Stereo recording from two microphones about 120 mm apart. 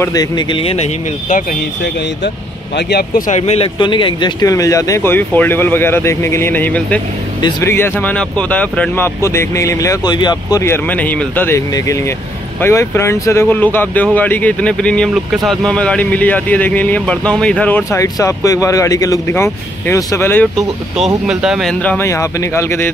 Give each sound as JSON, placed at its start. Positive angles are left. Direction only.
{"t": 0.1, "sound": "speech", "side_deg": 30}
{"t": 3.3, "sound": "speech", "side_deg": 65}
{"t": 3.8, "sound": "speech", "side_deg": 40}
{"t": 10.6, "sound": "speech", "side_deg": 15}
{"t": 12.6, "sound": "speech", "side_deg": 20}
{"t": 17.9, "sound": "speech", "side_deg": 25}
{"t": 21.3, "sound": "speech", "side_deg": -5}
{"t": 21.8, "sound": "speech", "side_deg": 20}